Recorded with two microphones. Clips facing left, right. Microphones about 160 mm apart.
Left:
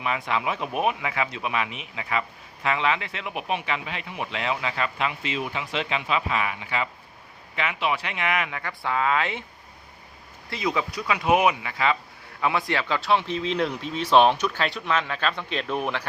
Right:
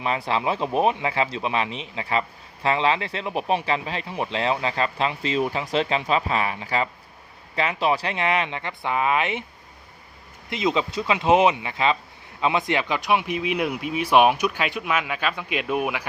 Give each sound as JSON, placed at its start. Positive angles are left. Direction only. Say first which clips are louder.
{"t": 0.0, "sound": "speech", "louder": "right 3 dB", "side_deg": -30}
{"t": 10.5, "sound": "speech", "louder": "right 3 dB", "side_deg": -20}